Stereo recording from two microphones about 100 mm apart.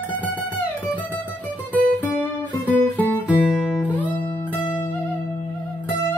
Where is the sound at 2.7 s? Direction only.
15° left (ahead or behind).